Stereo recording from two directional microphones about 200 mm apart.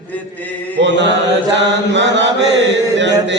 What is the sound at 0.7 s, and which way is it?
Mantra, 60° right (ahead or behind).